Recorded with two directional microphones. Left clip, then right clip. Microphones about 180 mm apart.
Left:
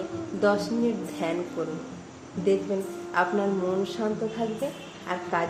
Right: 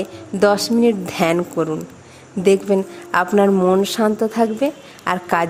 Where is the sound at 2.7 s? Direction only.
60° right (ahead or behind).